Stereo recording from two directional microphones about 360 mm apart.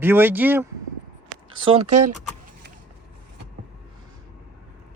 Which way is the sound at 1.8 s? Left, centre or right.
Right.